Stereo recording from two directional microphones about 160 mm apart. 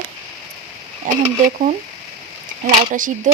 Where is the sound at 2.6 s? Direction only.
55° right (ahead or behind).